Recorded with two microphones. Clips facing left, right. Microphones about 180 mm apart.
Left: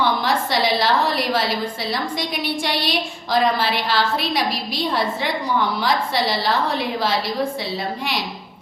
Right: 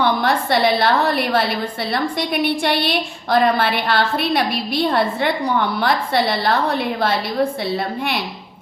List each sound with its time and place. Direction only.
0.0 s a woman's voice: 55° right (ahead or behind)